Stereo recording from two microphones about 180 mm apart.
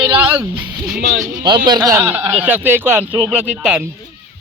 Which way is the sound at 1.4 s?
25° right (ahead or behind).